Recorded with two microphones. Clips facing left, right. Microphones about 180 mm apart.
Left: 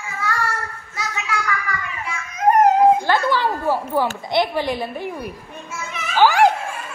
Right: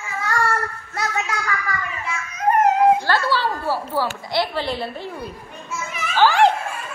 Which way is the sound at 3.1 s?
15° left (ahead or behind).